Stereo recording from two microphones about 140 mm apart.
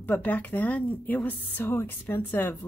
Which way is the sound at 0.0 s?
10° left (ahead or behind).